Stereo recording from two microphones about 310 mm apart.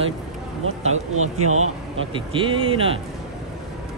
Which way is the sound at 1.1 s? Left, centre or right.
Right.